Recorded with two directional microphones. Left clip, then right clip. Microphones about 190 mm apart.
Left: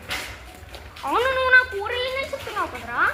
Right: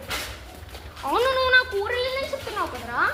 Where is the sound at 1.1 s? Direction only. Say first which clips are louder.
Left 2 dB; 5° left (ahead or behind).